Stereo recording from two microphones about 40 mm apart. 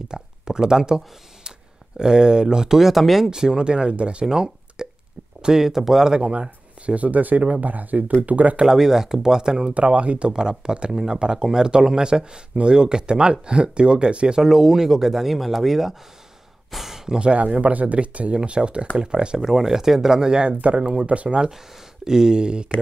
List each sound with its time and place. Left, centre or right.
0.1 s speech: centre
2.8 s speech: centre
3.3 s speech: centre
4.3 s a sound: centre
5.4 s speech: centre
6.1 s speech: right
8.6 s speech: centre
9.8 s speech: right
10.3 s speech: centre
17.2 s speech: right
19.3 s speech: centre; by 21.5 s right
22.0 s speech: centre